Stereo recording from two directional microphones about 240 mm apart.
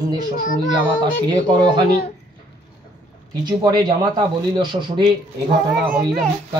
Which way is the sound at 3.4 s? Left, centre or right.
Centre.